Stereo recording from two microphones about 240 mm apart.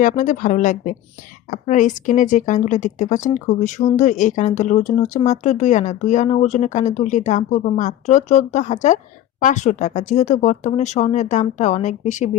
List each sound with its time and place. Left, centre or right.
0.0 s speech: left